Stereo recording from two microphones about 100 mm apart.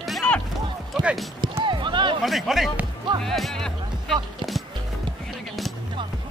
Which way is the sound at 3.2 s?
5° left (ahead or behind).